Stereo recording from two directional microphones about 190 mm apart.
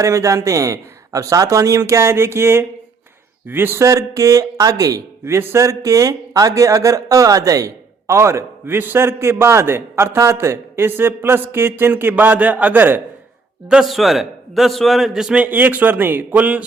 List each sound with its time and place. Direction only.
0.0 s a man's voice: 15° right (ahead or behind)